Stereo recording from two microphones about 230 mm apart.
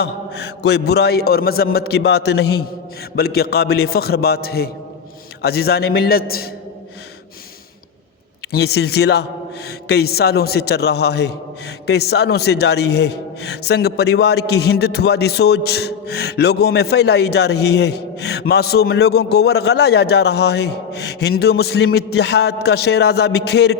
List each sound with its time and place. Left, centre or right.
0.0 s a man's voice: left
8.5 s a man's voice: left